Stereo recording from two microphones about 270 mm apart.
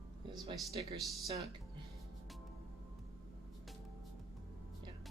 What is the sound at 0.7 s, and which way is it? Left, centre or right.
Speech, right.